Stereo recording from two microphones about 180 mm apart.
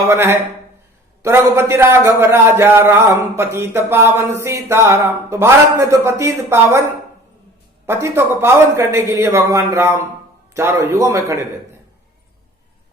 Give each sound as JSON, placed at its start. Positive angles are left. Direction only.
{"t": 0.1, "sound": "a man's voice", "side_deg": -15}
{"t": 7.9, "sound": "a man's voice", "side_deg": -15}